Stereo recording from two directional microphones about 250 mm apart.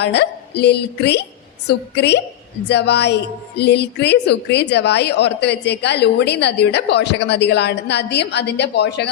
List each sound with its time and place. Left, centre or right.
0.0 s a woman's voice: left